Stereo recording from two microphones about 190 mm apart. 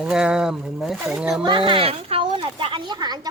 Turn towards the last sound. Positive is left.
turn(degrees=-20)  # may be behind; listen again after turning